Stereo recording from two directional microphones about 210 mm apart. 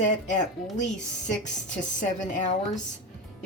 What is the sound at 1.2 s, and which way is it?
A woman's voice, 35° left (ahead or behind).